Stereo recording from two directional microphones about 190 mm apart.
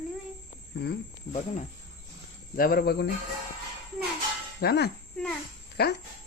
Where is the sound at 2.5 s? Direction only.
50° left (ahead or behind).